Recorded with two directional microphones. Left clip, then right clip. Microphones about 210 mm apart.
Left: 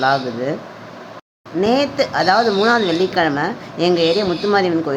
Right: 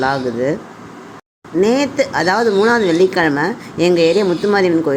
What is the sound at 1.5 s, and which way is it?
Speech, 15° right (ahead or behind).